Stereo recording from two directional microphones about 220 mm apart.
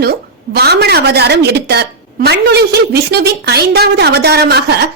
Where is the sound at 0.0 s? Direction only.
45° right (ahead or behind).